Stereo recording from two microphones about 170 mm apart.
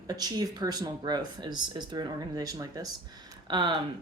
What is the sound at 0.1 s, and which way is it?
Speech, 20° right (ahead or behind).